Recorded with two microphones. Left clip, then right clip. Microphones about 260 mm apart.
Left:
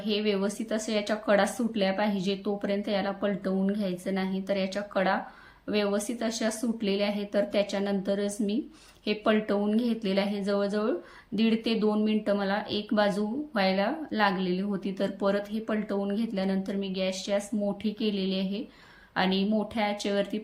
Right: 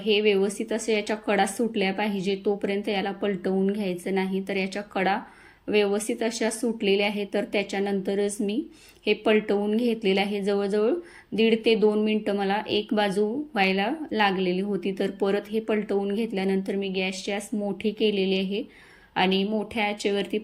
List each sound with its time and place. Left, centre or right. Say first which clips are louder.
0.0 s speech: right 7 dB; centre